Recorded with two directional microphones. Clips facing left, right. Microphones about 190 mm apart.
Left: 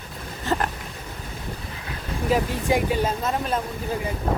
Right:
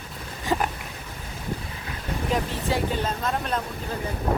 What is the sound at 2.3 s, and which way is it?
Speech, 5° left (ahead or behind).